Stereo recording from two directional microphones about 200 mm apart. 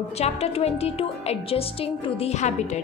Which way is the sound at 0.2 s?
30° left (ahead or behind).